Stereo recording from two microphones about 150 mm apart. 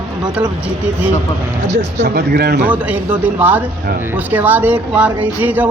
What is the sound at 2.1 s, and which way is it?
Speech, 90° right.